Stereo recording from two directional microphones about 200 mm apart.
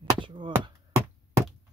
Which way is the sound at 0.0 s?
20° right (ahead or behind).